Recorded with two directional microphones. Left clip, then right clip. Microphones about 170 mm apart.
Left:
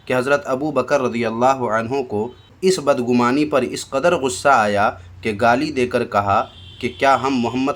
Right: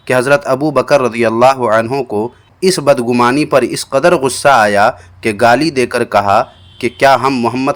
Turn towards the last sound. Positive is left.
turn(degrees=-25)  # may be behind; listen again after turning